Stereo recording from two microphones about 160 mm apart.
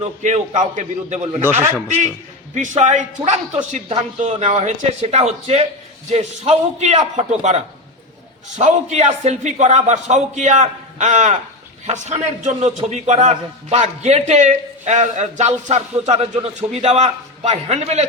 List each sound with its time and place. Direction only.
0.0 s a man's voice: 45° right (ahead or behind)
1.4 s a man's voice: 15° right (ahead or behind)
2.6 s a man's voice: 50° right (ahead or behind)